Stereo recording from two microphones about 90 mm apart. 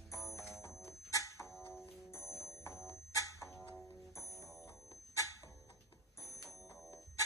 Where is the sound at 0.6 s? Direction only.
35° left (ahead or behind).